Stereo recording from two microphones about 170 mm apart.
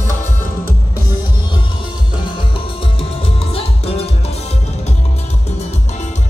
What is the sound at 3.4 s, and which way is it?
Salsa music, 35° left (ahead or behind).